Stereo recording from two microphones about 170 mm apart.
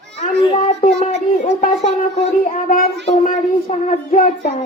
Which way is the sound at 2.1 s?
50° left (ahead or behind).